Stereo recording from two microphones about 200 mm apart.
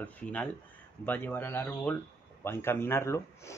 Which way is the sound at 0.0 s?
5° left (ahead or behind).